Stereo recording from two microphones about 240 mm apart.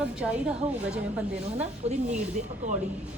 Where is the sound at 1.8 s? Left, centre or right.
Right.